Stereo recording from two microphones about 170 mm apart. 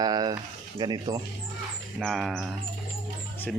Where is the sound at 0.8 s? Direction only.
25° right (ahead or behind).